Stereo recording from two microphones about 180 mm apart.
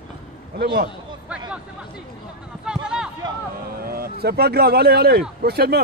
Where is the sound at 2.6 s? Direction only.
5° right (ahead or behind).